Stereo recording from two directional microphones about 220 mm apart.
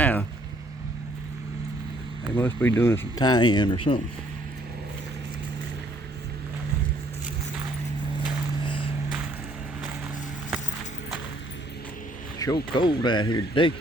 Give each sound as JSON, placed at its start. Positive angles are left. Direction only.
{"t": 0.0, "sound": "vehicle", "side_deg": 10}
{"t": 2.3, "sound": "speech", "side_deg": 10}
{"t": 8.2, "sound": "vehicle", "side_deg": 20}
{"t": 12.4, "sound": "a sound", "side_deg": 15}
{"t": 12.7, "sound": "speech", "side_deg": 20}